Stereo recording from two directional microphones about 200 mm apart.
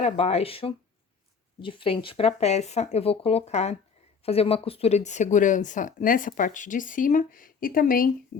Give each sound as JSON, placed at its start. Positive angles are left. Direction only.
{"t": 0.0, "sound": "speech", "side_deg": 30}